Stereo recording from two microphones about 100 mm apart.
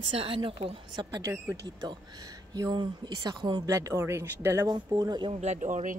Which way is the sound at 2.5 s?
45° right (ahead or behind).